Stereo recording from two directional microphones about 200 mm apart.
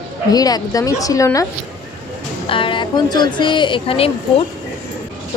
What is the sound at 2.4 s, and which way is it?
A woman's voice, 25° left (ahead or behind).